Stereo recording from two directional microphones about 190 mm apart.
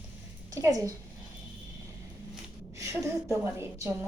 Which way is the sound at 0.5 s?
15° right (ahead or behind).